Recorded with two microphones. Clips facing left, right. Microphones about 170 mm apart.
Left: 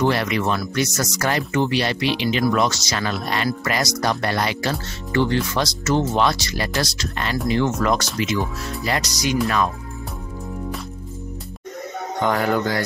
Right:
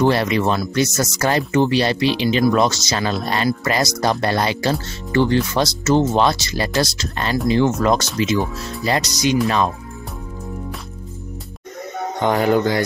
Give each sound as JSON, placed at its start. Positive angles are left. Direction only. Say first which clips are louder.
{"t": 0.0, "sound": "speech", "louder": "right 3 dB", "side_deg": -30}
{"t": 12.2, "sound": "speech", "louder": "right 4 dB", "side_deg": -20}